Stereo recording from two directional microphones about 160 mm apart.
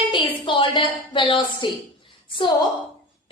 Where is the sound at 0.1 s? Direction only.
30° left (ahead or behind).